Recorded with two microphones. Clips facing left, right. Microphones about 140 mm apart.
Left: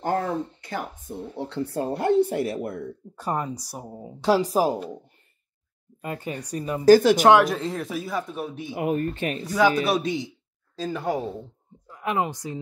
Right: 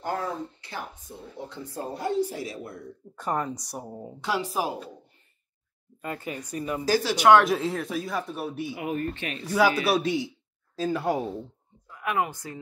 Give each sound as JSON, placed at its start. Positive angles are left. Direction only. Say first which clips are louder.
{"t": 0.0, "sound": "speech", "louder": "left 5 dB", "side_deg": 50}
{"t": 1.4, "sound": "speech", "louder": "left 7 dB", "side_deg": 70}
{"t": 3.3, "sound": "speech", "louder": "left 1 dB", "side_deg": 15}
{"t": 4.2, "sound": "speech", "louder": "left 8 dB", "side_deg": 35}
{"t": 5.9, "sound": "speech", "louder": "left 2 dB", "side_deg": 25}
{"t": 6.9, "sound": "speech", "louder": "left 12 dB", "side_deg": 50}
{"t": 7.4, "sound": "speech", "louder": "right 1 dB", "side_deg": 0}
{"t": 8.7, "sound": "speech", "louder": "left 9 dB", "side_deg": 40}
{"t": 9.8, "sound": "speech", "louder": "even", "side_deg": -5}
{"t": 11.9, "sound": "speech", "louder": "left 2 dB", "side_deg": 25}